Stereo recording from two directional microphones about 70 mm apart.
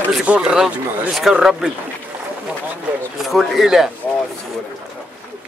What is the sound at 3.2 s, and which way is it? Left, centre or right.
Speech, centre.